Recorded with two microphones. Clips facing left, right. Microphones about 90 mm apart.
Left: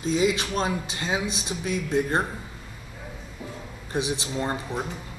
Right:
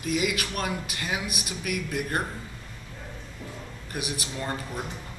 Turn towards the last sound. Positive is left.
turn(degrees=25)  # may be behind; listen again after turning